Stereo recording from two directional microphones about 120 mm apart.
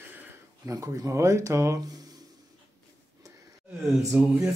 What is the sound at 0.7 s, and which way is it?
Speech, 25° right (ahead or behind).